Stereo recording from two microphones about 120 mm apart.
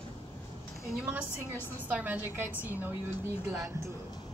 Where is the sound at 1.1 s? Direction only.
15° right (ahead or behind).